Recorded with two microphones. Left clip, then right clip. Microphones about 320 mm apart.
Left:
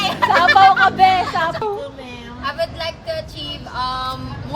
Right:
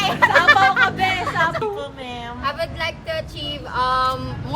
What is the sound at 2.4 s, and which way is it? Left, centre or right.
Vehicle, centre.